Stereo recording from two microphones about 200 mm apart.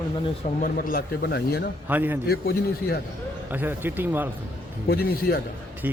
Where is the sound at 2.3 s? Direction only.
50° left (ahead or behind).